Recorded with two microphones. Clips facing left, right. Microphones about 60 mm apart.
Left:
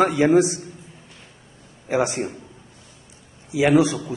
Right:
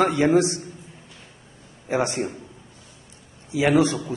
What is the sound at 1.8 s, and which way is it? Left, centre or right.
Speech, centre.